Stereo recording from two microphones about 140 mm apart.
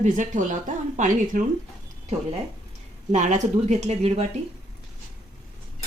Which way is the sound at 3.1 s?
60° right (ahead or behind).